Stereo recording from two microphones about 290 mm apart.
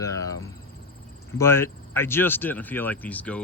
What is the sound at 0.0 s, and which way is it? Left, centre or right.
Cricket, centre.